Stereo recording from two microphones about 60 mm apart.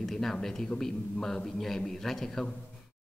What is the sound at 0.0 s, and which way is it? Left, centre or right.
A man's voice, centre.